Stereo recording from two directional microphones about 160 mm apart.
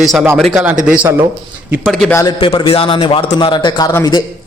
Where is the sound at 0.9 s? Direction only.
15° right (ahead or behind).